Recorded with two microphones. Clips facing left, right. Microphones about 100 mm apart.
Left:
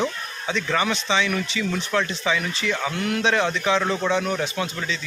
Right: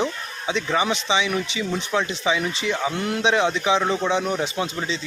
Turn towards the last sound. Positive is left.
turn(degrees=-25)  # may be behind; listen again after turning